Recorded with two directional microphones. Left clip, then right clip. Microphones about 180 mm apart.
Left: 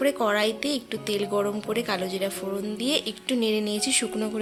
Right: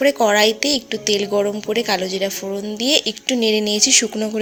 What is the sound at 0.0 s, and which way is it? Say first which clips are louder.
A woman's voice: right 9 dB; 20° right (ahead or behind).